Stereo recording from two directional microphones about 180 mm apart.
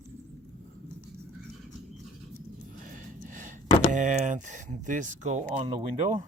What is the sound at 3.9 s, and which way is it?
Speech, 45° right (ahead or behind).